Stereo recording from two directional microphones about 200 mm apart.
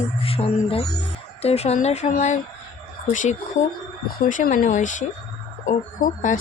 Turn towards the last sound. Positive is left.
turn(degrees=40)  # may be behind; listen again after turning